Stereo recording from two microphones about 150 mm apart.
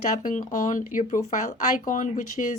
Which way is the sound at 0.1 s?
60° left (ahead or behind).